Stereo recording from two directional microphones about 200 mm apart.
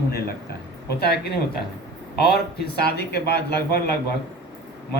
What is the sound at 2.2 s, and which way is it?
Speech, 55° left (ahead or behind).